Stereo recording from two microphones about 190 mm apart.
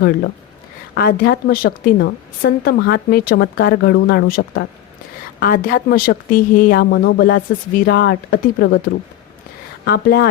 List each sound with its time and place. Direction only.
0.9 s a woman's voice: 55° left (ahead or behind)
9.8 s a woman's voice: 55° left (ahead or behind)